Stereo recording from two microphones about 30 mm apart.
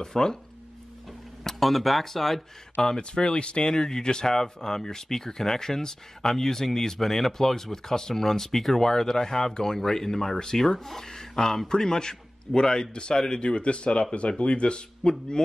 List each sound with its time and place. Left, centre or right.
0.0 s speech: left
1.4 s speech: centre
3.0 s speech: left